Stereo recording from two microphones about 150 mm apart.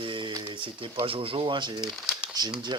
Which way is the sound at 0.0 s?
35° right (ahead or behind).